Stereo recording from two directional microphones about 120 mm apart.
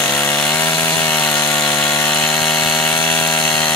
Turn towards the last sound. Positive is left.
turn(degrees=10)  # may be behind; listen again after turning